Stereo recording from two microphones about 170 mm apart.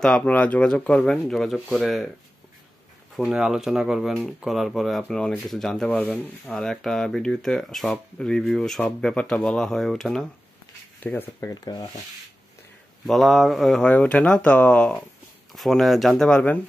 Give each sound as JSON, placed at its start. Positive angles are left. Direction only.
{"t": 0.0, "sound": "speech", "side_deg": 5}
{"t": 3.3, "sound": "speech", "side_deg": -5}
{"t": 11.0, "sound": "speech", "side_deg": 10}
{"t": 11.6, "sound": "speech", "side_deg": 25}
{"t": 13.0, "sound": "speech", "side_deg": 0}